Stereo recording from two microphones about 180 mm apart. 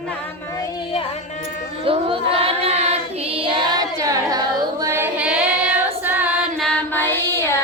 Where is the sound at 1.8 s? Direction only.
30° right (ahead or behind).